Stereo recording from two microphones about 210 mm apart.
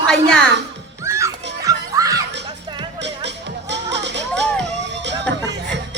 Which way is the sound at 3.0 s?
55° right (ahead or behind).